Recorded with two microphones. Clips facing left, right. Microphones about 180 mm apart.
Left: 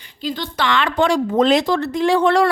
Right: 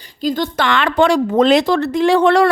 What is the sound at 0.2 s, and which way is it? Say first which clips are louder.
A woman's voice: right 5 dB; 45° right (ahead or behind).